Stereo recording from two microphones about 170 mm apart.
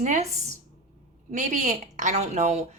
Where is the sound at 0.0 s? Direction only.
40° right (ahead or behind).